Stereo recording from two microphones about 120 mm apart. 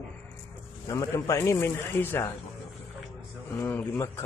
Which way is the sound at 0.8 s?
25° left (ahead or behind).